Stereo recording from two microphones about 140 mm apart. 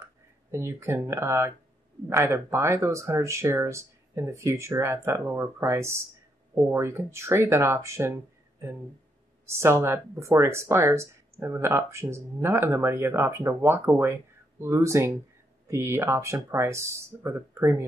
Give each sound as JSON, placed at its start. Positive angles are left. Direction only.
{"t": 0.0, "sound": "speech", "side_deg": -20}